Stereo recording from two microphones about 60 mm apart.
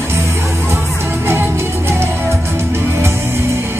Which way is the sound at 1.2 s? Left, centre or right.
Right.